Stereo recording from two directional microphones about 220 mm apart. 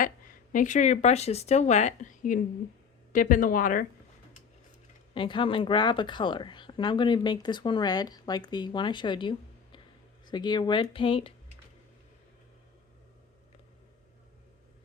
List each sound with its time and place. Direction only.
0.0 s a woman's voice: 40° left (ahead or behind)
5.1 s a woman's voice: 20° left (ahead or behind)